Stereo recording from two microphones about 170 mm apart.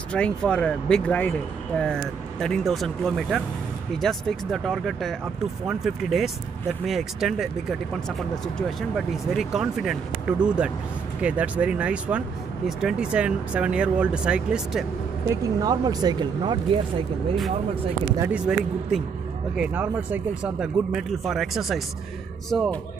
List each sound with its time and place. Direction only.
0.1 s speech: 5° left (ahead or behind)
2.4 s speech: centre (ahead or behind)
8.5 s speech: centre (ahead or behind)
15.2 s speech: 20° right (ahead or behind)
18.3 s speech: 5° right (ahead or behind)